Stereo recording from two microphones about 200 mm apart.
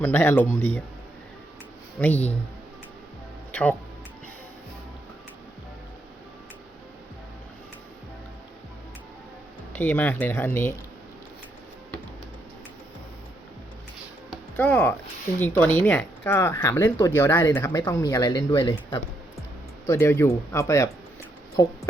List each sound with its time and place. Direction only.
0.0 s speech: 10° left (ahead or behind)
2.0 s speech: 10° left (ahead or behind)
3.5 s speech: 10° left (ahead or behind)
9.7 s speech: 10° left (ahead or behind)
14.5 s speech: 10° left (ahead or behind)